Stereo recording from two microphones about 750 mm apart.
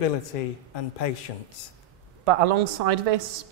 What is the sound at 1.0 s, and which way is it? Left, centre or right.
Speech, left.